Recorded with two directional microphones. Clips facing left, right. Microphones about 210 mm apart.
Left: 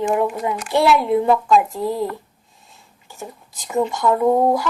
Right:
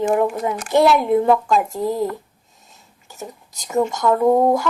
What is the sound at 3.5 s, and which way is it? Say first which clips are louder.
Speech: right 1 dB; 40° right (ahead or behind).